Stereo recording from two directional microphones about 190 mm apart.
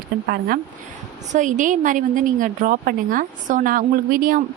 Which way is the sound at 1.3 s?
40° right (ahead or behind).